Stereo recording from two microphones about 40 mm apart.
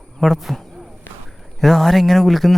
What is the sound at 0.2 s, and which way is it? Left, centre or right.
A man's voice, centre.